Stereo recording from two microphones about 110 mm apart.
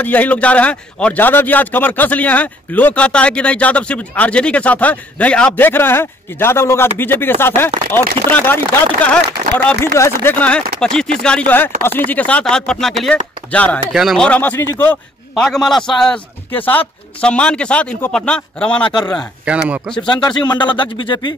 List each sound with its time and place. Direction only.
0.0 s a man's voice: 15° left (ahead or behind)
9.8 s speech: 25° left (ahead or behind)
10.3 s a man's voice: 10° left (ahead or behind)
13.5 s a man's voice: 15° left (ahead or behind)
13.9 s a man's voice: centre (ahead or behind); by 15.0 s 20° left (ahead or behind)
15.3 s a man's voice: 5° left (ahead or behind)
16.5 s a man's voice: 15° left (ahead or behind)
18.9 s a man's voice: 40° left (ahead or behind)
19.5 s speech: 10° right (ahead or behind)
20.1 s speech: 40° left (ahead or behind)